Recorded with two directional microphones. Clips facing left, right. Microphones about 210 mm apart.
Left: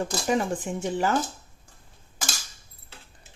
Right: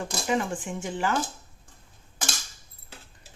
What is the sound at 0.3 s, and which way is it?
Speech, 40° left (ahead or behind).